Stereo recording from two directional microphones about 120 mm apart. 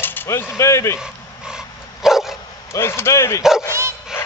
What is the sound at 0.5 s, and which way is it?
Speech, 25° left (ahead or behind).